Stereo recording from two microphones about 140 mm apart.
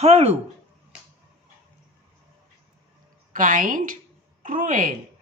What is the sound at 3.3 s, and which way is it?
A woman's voice, 70° right (ahead or behind).